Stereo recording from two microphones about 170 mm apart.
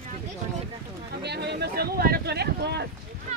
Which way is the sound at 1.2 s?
75° right (ahead or behind).